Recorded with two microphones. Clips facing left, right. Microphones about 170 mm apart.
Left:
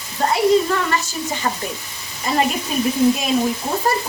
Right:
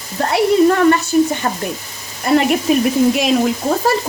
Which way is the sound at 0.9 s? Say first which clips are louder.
Right 11 dB; 55° right (ahead or behind).